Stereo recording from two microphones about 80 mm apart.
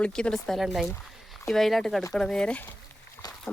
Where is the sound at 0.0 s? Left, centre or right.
Centre.